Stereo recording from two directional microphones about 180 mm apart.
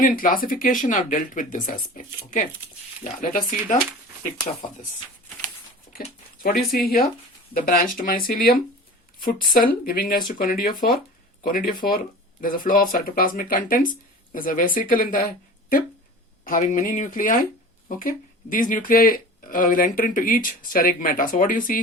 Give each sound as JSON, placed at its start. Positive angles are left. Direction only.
{"t": 0.0, "sound": "speech", "side_deg": 50}
{"t": 6.4, "sound": "speech", "side_deg": 55}
{"t": 16.4, "sound": "speech", "side_deg": 45}